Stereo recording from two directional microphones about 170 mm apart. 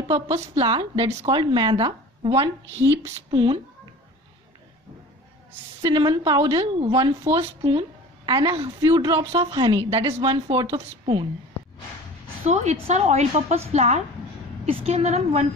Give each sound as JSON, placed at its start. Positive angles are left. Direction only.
{"t": 0.3, "sound": "speech", "side_deg": -30}
{"t": 5.8, "sound": "a woman's voice", "side_deg": -25}
{"t": 12.4, "sound": "a woman's voice", "side_deg": -40}